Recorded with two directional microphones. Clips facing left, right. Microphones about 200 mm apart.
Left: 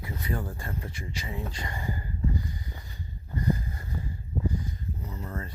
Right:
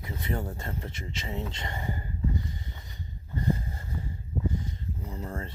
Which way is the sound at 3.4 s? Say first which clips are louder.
Left 1 dB; 25° right (ahead or behind).